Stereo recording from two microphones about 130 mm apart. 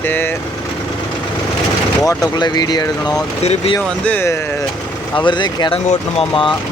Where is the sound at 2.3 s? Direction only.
35° left (ahead or behind).